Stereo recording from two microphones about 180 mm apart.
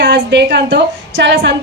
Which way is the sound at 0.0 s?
90° right.